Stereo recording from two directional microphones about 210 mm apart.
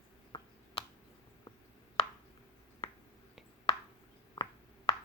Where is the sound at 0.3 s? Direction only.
20° left (ahead or behind).